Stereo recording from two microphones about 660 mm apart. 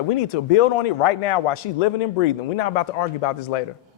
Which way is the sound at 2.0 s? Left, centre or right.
Left.